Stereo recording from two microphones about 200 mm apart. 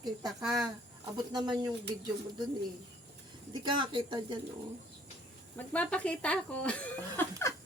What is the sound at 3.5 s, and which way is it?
Speech, 20° right (ahead or behind).